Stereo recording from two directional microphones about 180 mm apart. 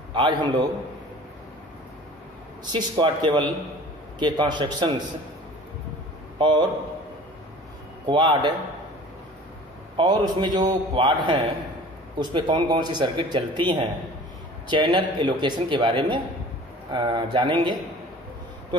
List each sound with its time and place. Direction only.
0.1 s speech: 25° right (ahead or behind)
2.6 s speech: 25° right (ahead or behind)
6.3 s a man's voice: 25° right (ahead or behind)
8.1 s speech: 25° right (ahead or behind)
9.9 s speech: 25° right (ahead or behind)